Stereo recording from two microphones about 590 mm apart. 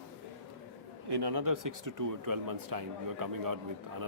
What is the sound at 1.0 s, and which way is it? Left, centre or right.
Speech, right.